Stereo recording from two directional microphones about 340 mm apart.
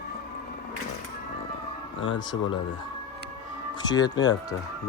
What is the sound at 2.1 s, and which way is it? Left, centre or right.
Speech, centre.